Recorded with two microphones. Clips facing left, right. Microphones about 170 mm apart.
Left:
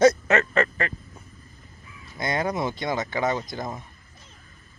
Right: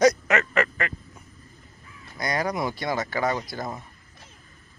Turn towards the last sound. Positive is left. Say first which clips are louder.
# left 1 dB
turn(degrees=20)  # may be behind; listen again after turning